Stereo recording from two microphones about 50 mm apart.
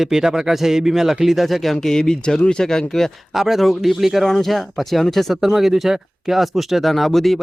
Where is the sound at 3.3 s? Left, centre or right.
Centre.